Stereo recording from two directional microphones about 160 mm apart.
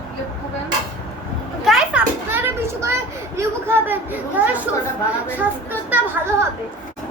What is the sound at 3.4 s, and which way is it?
Speech, 15° right (ahead or behind).